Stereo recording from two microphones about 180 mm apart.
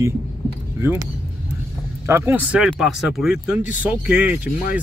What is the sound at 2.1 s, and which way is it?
Speech, 10° right (ahead or behind).